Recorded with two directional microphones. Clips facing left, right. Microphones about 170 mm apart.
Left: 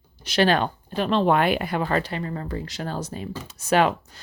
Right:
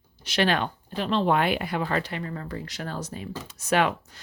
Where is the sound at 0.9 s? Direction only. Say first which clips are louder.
Left 3 dB; 55° left (ahead or behind); by 4.2 s 35° left (ahead or behind).